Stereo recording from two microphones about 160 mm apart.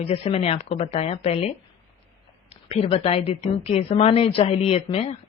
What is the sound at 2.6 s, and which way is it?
Speech, 40° left (ahead or behind).